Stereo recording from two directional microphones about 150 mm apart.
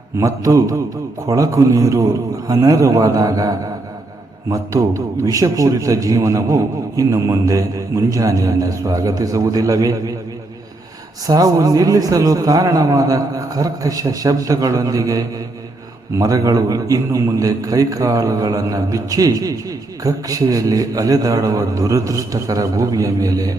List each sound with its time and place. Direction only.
0.2 s a man's voice: 20° right (ahead or behind)
11.3 s a man's voice: 25° right (ahead or behind)